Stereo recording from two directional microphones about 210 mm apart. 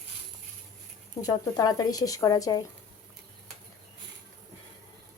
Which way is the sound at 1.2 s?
15° left (ahead or behind).